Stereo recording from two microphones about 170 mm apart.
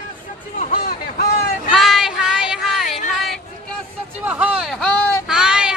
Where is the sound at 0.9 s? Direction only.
65° left (ahead or behind).